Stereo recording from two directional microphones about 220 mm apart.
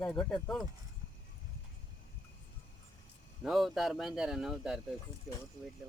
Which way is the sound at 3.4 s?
Centre (ahead or behind).